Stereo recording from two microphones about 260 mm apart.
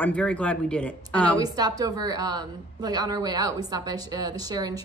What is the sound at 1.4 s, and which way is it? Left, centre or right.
A woman's voice, centre.